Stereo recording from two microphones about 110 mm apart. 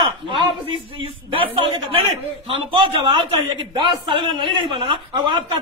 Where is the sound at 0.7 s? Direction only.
50° right (ahead or behind).